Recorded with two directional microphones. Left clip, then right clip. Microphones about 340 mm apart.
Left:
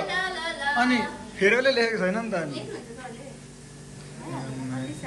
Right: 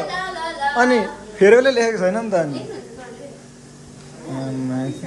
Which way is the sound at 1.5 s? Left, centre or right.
Centre.